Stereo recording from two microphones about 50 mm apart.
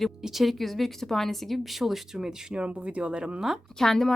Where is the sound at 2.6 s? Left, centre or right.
Right.